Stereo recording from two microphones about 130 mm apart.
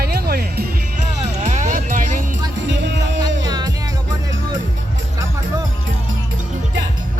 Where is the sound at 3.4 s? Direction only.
30° right (ahead or behind).